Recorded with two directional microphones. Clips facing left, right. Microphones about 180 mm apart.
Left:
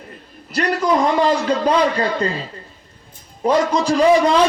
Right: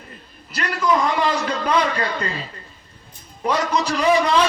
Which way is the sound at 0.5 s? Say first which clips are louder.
Left 3 dB; 40° left (ahead or behind).